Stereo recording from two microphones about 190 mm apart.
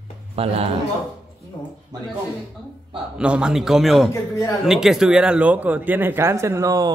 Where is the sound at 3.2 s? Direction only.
5° right (ahead or behind).